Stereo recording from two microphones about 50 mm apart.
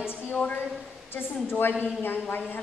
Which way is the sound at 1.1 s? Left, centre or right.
Left.